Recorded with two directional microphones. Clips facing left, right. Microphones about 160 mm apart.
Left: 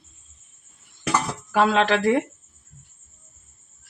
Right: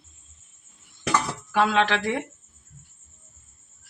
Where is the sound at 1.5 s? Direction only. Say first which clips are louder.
Left 3 dB; 35° left (ahead or behind).